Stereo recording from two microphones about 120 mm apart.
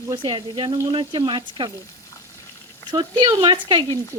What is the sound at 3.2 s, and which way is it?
Speech, 40° right (ahead or behind).